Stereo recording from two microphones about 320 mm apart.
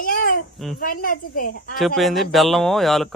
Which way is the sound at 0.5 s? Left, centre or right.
Centre.